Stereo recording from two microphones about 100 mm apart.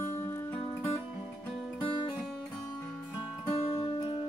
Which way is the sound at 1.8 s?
60° left (ahead or behind).